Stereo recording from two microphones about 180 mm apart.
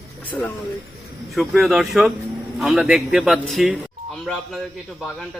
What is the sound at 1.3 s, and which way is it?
Speech, centre (ahead or behind).